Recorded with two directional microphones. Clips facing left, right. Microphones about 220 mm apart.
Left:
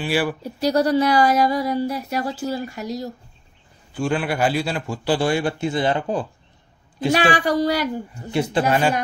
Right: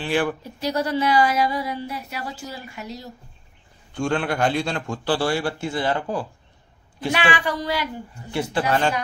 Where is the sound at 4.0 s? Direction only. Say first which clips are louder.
Left 1 dB; 5° left (ahead or behind).